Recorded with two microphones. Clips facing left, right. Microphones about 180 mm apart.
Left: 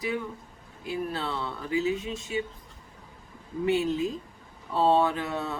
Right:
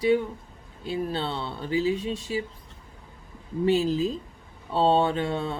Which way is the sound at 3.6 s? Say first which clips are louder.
Right 3 dB; 30° right (ahead or behind).